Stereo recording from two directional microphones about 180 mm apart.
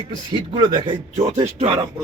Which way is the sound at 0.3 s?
25° right (ahead or behind).